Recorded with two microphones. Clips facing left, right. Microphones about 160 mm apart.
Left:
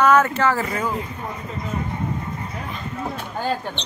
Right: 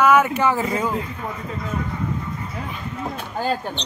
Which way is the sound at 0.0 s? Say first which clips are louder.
Even; 10° right (ahead or behind).